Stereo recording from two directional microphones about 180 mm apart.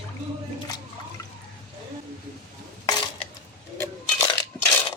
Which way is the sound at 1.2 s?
15° left (ahead or behind).